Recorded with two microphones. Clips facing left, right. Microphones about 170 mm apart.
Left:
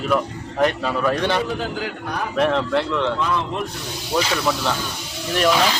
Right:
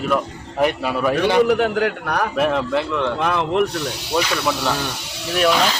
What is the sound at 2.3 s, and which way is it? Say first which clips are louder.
Speech: left 2 dB; 5° right (ahead or behind).